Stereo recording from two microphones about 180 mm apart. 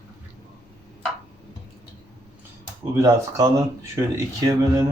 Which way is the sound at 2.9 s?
15° right (ahead or behind).